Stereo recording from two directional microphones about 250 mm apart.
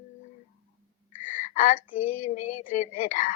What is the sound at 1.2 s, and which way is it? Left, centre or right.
Female singing, left.